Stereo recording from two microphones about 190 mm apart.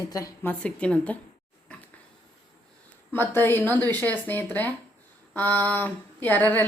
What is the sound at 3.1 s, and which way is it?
A woman's voice, 10° left (ahead or behind).